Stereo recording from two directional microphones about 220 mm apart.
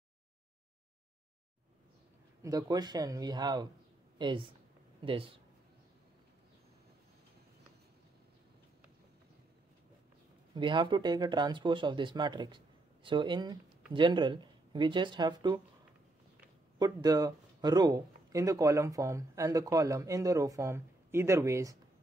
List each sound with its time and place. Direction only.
2.4 s speech: 15° right (ahead or behind)
10.5 s speech: 20° right (ahead or behind)
16.7 s speech: 15° right (ahead or behind)